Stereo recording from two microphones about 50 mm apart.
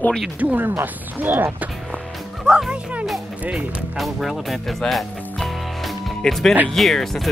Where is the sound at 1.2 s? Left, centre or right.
Right.